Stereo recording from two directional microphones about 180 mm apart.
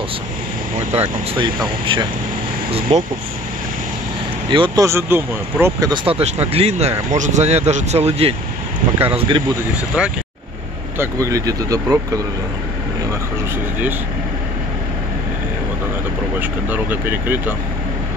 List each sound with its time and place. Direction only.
0.9 s speech: 35° right (ahead or behind)
1.4 s speech: 25° right (ahead or behind)
4.5 s speech: 25° right (ahead or behind)
6.1 s speech: 35° right (ahead or behind)
10.0 s speech: 5° right (ahead or behind)
11.0 s speech: 15° right (ahead or behind)
16.3 s speech: 10° right (ahead or behind)